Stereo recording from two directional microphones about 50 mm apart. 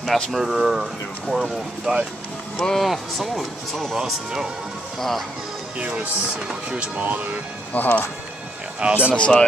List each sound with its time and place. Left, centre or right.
0.0 s speech: centre
2.5 s speech: centre
3.9 s speech: centre
5.8 s speech: right
7.0 s speech: right
7.7 s speech: left
8.7 s speech: right
9.1 s speech: left